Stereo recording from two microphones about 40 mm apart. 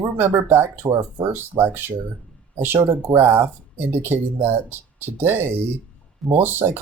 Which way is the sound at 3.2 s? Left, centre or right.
Right.